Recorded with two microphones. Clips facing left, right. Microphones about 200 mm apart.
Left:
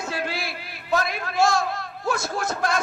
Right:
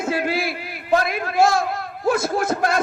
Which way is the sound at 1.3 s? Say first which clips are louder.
Right 3 dB; 55° right (ahead or behind).